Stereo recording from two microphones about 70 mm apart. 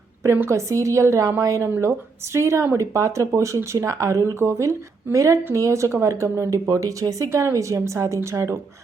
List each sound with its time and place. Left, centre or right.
0.5 s a woman's voice: right
7.3 s speech: right